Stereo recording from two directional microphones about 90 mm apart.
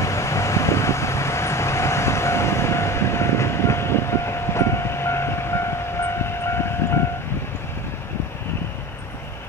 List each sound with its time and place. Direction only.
0.0 s vehicle: 35° left (ahead or behind)